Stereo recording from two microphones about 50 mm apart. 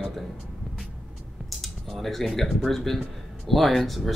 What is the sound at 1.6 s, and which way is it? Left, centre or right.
Speech, centre.